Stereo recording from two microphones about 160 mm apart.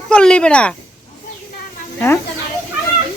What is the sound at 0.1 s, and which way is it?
Speech, 5° left (ahead or behind).